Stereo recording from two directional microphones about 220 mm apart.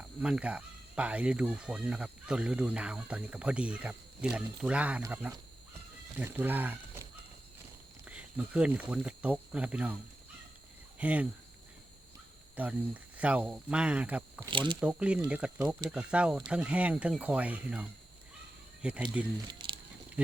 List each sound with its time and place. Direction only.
0.0 s speech: 5° right (ahead or behind)
12.5 s speech: 5° right (ahead or behind)
14.4 s speech: 20° right (ahead or behind)
14.8 s speech: 5° right (ahead or behind)
19.5 s a sound: 20° right (ahead or behind)